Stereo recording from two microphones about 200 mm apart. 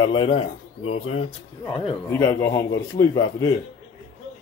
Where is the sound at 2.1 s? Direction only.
15° left (ahead or behind).